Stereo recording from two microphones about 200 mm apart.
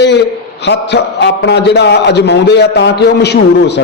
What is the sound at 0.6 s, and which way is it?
A man's voice, 60° left (ahead or behind).